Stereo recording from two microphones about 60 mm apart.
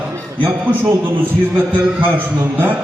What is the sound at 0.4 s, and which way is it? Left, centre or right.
A man's voice, right.